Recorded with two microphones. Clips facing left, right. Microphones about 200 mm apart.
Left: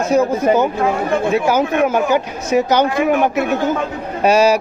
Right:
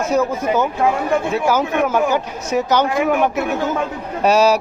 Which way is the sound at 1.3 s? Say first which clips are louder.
Left 2 dB; 15° left (ahead or behind).